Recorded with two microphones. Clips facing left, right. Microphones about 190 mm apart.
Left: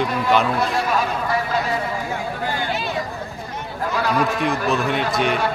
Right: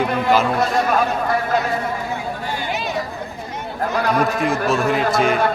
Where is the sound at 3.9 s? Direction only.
50° right (ahead or behind).